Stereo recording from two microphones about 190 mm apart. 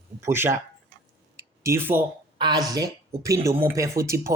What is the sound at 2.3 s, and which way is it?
A woman's voice, 20° right (ahead or behind).